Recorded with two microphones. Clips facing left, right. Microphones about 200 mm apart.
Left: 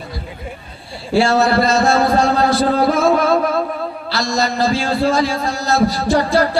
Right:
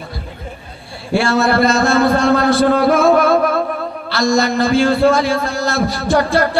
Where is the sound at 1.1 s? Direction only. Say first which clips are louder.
Left 1 dB; 55° right (ahead or behind).